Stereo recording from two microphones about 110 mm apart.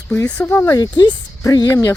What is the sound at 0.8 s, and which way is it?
Speech, 40° left (ahead or behind).